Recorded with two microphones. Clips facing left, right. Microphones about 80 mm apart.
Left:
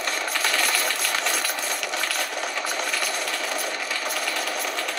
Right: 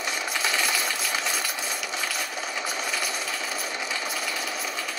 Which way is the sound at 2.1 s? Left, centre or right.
Left.